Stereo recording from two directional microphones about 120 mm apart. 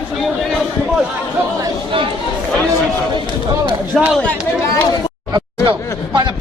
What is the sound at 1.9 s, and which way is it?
Speech, 45° right (ahead or behind).